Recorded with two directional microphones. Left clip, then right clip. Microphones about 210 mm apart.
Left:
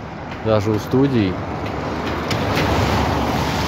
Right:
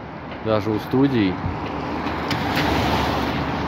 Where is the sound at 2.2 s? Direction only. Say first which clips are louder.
Left 2 dB; 40° right (ahead or behind).